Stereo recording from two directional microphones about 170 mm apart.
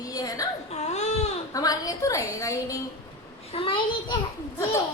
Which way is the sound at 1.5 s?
20° left (ahead or behind).